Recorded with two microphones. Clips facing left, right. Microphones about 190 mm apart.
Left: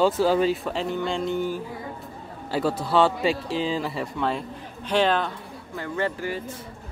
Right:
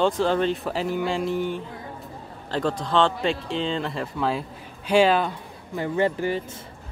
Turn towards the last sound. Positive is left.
turn(degrees=-20)  # may be behind; listen again after turning